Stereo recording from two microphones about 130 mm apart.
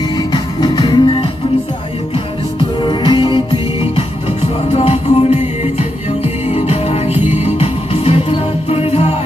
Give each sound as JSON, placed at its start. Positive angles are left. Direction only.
{"t": 0.3, "sound": "music", "side_deg": 35}
{"t": 2.8, "sound": "music", "side_deg": 35}